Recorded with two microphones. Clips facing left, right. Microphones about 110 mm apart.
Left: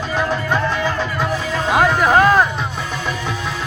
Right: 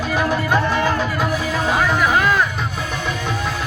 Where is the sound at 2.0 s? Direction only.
40° left (ahead or behind).